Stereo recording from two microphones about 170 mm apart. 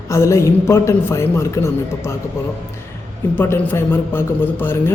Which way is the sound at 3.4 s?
15° left (ahead or behind).